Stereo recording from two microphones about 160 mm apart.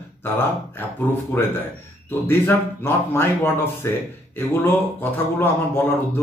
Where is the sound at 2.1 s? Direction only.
15° left (ahead or behind).